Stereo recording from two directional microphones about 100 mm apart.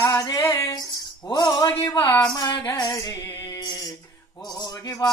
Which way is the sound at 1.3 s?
40° left (ahead or behind).